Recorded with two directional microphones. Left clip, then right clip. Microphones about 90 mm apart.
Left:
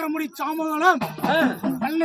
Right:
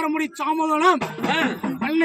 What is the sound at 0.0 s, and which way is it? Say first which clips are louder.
Speech: right 3 dB; 20° left (ahead or behind).